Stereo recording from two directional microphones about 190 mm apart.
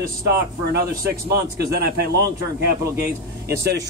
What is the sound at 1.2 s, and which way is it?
Speech, 55° right (ahead or behind).